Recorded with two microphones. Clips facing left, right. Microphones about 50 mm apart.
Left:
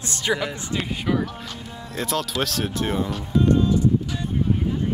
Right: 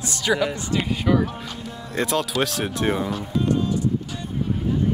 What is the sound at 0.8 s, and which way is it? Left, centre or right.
Speech, centre.